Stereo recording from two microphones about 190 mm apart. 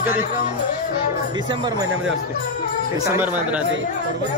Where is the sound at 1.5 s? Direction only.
25° right (ahead or behind).